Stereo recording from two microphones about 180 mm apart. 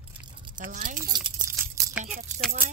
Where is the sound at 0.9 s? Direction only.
20° right (ahead or behind).